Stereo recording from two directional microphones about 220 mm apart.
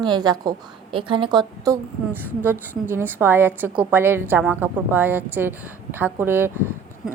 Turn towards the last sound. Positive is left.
turn(degrees=-10)  # may be behind; listen again after turning